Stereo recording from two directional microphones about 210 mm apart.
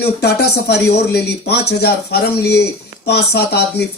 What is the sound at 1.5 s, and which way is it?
Speech, 50° left (ahead or behind).